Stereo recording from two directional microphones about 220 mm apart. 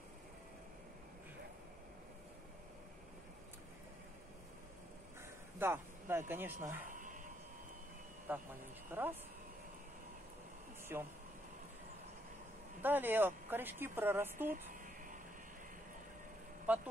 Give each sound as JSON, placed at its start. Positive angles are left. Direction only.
{"t": 5.6, "sound": "speech", "side_deg": -10}
{"t": 6.9, "sound": "a sound", "side_deg": -35}
{"t": 8.3, "sound": "speech", "side_deg": -10}
{"t": 10.9, "sound": "speech", "side_deg": -10}
{"t": 12.8, "sound": "speech", "side_deg": -10}
{"t": 14.5, "sound": "a sound", "side_deg": -40}
{"t": 16.6, "sound": "speech", "side_deg": -5}